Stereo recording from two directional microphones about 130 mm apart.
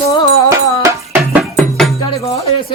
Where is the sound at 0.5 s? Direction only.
25° right (ahead or behind).